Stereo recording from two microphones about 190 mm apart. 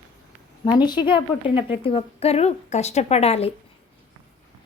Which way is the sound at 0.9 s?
25° left (ahead or behind).